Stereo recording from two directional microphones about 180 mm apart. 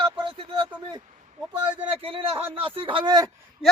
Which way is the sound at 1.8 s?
30° right (ahead or behind).